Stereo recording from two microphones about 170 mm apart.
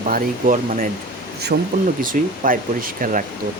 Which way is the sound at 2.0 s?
55° right (ahead or behind).